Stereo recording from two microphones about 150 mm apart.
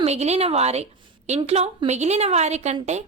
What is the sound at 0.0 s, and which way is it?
A woman's voice, 45° right (ahead or behind).